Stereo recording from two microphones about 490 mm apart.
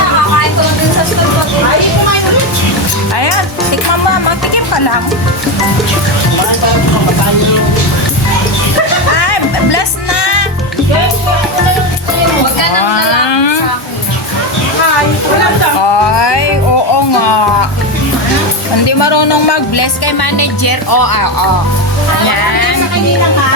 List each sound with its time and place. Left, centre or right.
4.1 s music: left
9.1 s music: left
12.9 s a sound: left
15.9 s music: left
18.9 s music: left
22.3 s music: left